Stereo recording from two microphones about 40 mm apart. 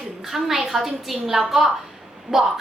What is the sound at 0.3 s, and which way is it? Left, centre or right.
A woman's voice, centre.